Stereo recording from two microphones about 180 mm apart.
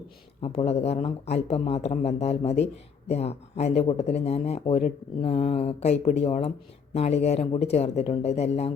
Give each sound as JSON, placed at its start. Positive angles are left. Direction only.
{"t": 0.4, "sound": "speech", "side_deg": 35}